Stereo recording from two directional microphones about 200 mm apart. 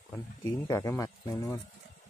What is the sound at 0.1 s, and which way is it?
Speech, 15° left (ahead or behind).